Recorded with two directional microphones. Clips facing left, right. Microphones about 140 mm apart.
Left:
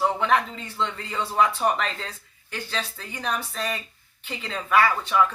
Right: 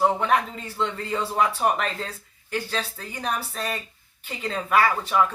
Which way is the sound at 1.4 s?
35° right (ahead or behind).